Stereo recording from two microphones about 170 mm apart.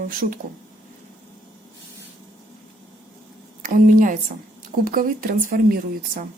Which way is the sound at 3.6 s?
55° right (ahead or behind).